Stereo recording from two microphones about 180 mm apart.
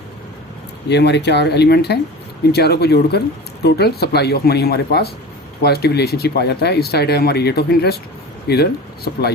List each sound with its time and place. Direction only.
0.9 s speech: 70° left (ahead or behind)